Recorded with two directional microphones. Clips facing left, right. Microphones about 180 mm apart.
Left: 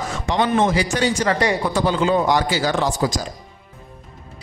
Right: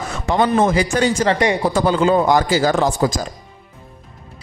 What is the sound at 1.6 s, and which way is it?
A man's voice, 45° right (ahead or behind).